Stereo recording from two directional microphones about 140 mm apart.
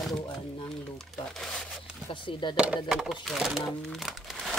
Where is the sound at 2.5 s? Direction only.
5° right (ahead or behind).